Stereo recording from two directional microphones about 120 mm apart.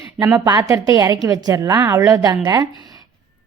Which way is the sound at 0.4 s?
35° right (ahead or behind).